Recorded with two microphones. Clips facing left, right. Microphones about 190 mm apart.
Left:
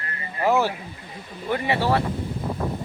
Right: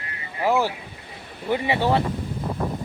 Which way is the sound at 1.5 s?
15° right (ahead or behind).